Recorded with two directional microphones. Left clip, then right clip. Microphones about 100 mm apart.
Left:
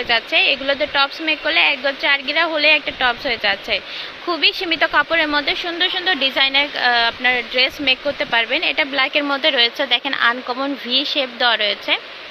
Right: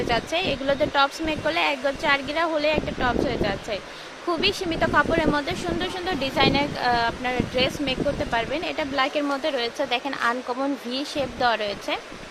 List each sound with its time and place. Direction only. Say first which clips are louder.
0.1 s speech: left 11 dB; 20° right (ahead or behind)
7.2 s speech: left 7 dB; 5° right (ahead or behind)